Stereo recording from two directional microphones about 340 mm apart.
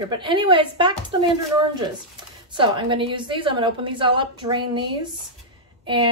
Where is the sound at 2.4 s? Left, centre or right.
Centre.